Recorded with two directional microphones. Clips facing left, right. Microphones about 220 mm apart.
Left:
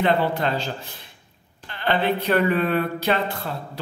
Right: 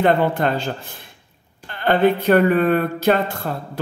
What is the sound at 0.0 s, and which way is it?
Speech, 50° right (ahead or behind).